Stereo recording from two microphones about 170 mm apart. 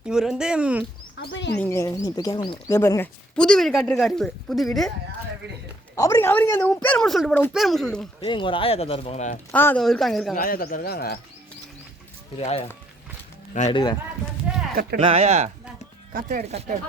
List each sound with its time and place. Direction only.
0.0 s speech: 5° right (ahead or behind)
1.2 s speech: 90° left
1.5 s speech: 15° left (ahead or behind)
3.3 s speech: 5° left (ahead or behind)
6.0 s speech: 15° left (ahead or behind)
8.2 s speech: 30° left (ahead or behind)
9.5 s speech: 10° left (ahead or behind)
10.3 s speech: 55° left (ahead or behind)
12.4 s speech: 35° left (ahead or behind)
13.7 s speech: 25° left (ahead or behind)
14.5 s speech: 5° right (ahead or behind)
14.9 s speech: 35° right (ahead or behind)